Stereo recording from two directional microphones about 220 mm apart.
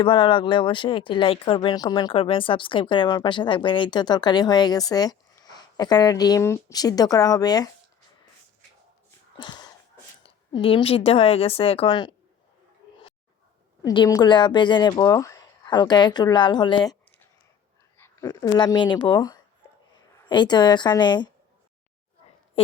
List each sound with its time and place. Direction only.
0.0 s speech: 20° left (ahead or behind)
9.4 s a sound: 20° left (ahead or behind)
10.2 s speech: 25° left (ahead or behind)
13.8 s speech: 15° left (ahead or behind)
22.6 s speech: 25° left (ahead or behind)